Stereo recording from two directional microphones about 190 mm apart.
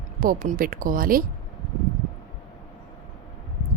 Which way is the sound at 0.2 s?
45° right (ahead or behind).